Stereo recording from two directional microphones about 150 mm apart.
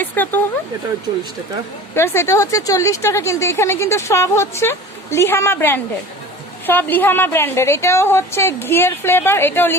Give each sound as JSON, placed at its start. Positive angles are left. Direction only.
{"t": 0.0, "sound": "speech", "side_deg": 10}
{"t": 2.0, "sound": "speech", "side_deg": 15}